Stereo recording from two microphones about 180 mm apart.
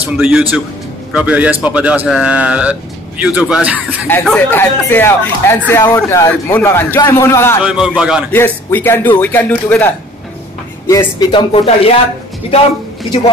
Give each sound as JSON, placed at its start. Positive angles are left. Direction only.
{"t": 0.2, "sound": "a man's voice", "side_deg": -5}
{"t": 4.1, "sound": "a man's voice", "side_deg": 5}
{"t": 7.6, "sound": "a man's voice", "side_deg": -5}
{"t": 8.3, "sound": "a man's voice", "side_deg": 10}
{"t": 10.9, "sound": "speech", "side_deg": 20}